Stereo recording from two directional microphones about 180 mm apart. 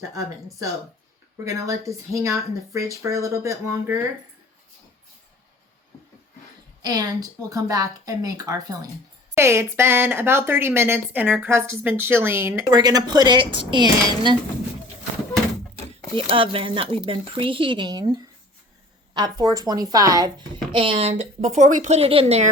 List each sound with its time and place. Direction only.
1.5 s speech: 20° right (ahead or behind)
6.8 s speech: 20° right (ahead or behind)
16.3 s speech: 30° right (ahead or behind)
20.7 s a woman's voice: 30° right (ahead or behind)